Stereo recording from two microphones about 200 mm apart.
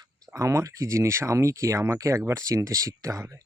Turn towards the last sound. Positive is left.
turn(degrees=-15)  # may be behind; listen again after turning